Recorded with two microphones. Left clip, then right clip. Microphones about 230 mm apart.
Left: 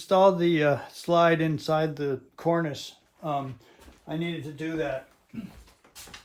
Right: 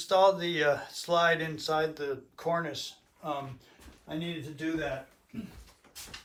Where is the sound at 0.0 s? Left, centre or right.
Left.